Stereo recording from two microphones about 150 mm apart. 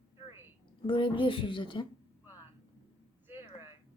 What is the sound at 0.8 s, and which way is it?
A woman's voice, 35° left (ahead or behind).